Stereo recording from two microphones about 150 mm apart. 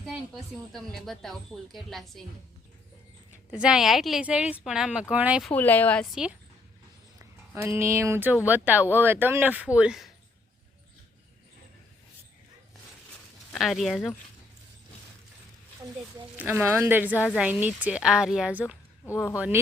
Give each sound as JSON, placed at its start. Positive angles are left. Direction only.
{"t": 0.5, "sound": "a woman's voice", "side_deg": 0}
{"t": 3.5, "sound": "speech", "side_deg": -5}
{"t": 5.5, "sound": "speech", "side_deg": 10}
{"t": 7.2, "sound": "a sound", "side_deg": -20}
{"t": 7.9, "sound": "speech", "side_deg": -15}
{"t": 13.5, "sound": "speech", "side_deg": 0}
{"t": 16.5, "sound": "speech", "side_deg": -15}
{"t": 19.0, "sound": "speech", "side_deg": 20}